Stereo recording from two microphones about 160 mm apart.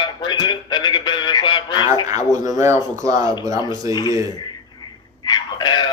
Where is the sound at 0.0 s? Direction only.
30° left (ahead or behind).